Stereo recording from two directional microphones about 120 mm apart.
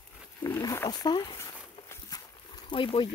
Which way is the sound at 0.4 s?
30° left (ahead or behind).